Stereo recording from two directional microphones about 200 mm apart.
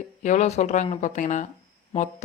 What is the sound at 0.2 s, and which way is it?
Speech, 35° left (ahead or behind).